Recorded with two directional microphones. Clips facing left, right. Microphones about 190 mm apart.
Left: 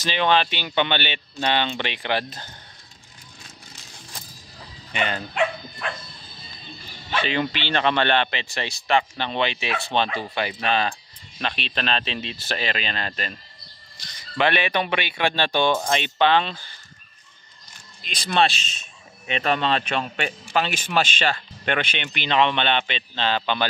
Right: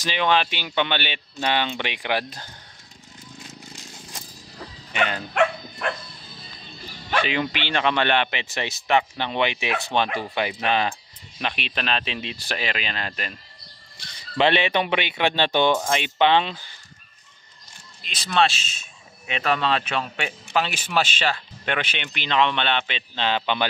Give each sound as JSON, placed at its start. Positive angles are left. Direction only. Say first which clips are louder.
{"t": 0.0, "sound": "speech", "louder": "left 1 dB", "side_deg": -5}
{"t": 5.3, "sound": "dog", "louder": "right 2 dB", "side_deg": -55}
{"t": 7.2, "sound": "speech", "louder": "left 1 dB", "side_deg": -10}
{"t": 14.3, "sound": "speech", "louder": "right 2 dB", "side_deg": -25}
{"t": 18.0, "sound": "speech", "louder": "even", "side_deg": 0}